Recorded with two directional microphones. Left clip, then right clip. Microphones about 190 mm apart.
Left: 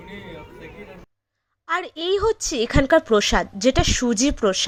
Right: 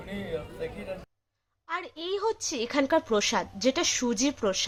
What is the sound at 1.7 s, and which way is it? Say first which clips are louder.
A woman's voice: left 10 dB; 30° left (ahead or behind).